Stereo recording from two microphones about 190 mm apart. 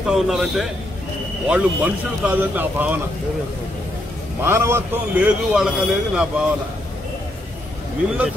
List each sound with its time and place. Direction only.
0.0 s a man's voice: centre (ahead or behind)
4.4 s a man's voice: 10° right (ahead or behind)